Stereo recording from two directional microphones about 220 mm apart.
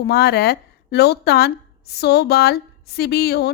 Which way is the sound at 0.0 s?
45° left (ahead or behind).